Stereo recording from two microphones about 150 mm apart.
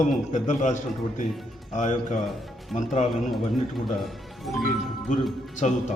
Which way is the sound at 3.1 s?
Centre (ahead or behind).